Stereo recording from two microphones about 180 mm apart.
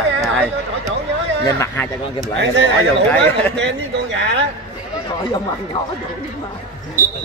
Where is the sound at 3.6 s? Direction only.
80° right.